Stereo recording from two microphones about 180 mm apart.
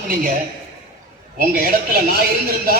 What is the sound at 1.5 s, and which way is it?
Speech, 55° right (ahead or behind).